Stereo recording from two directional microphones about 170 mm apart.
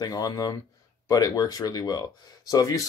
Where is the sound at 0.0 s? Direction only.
20° left (ahead or behind).